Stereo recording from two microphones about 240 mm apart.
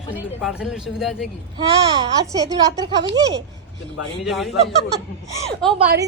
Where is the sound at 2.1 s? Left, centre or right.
Centre.